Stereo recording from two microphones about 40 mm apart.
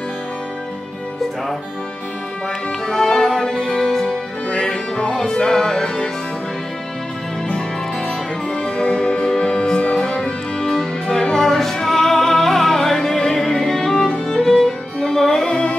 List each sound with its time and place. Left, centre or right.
2.9 s music: centre
5.1 s music: centre
8.6 s music: left
11.4 s music: centre